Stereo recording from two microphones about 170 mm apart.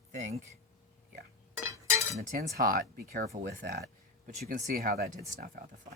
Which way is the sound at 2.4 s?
55° right (ahead or behind).